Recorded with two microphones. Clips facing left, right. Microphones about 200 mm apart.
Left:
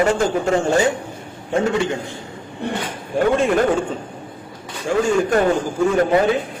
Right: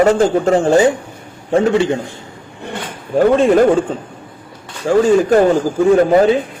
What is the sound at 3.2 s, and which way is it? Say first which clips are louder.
Speech: right 6 dB; 35° right (ahead or behind).